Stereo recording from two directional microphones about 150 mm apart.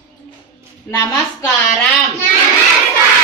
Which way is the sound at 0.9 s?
20° left (ahead or behind).